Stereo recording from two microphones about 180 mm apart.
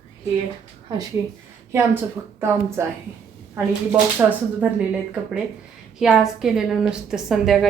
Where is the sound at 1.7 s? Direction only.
15° right (ahead or behind).